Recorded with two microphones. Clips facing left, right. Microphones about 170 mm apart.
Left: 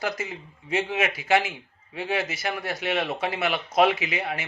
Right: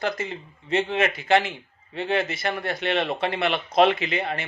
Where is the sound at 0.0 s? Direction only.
10° left (ahead or behind).